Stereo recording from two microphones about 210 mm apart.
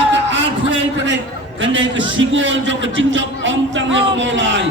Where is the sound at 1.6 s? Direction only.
60° right (ahead or behind).